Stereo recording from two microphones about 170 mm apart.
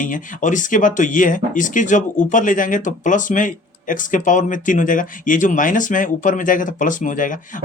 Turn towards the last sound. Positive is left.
turn(degrees=50)  # may be behind; listen again after turning